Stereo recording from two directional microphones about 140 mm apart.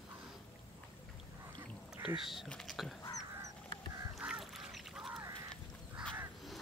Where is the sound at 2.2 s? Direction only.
Centre (ahead or behind).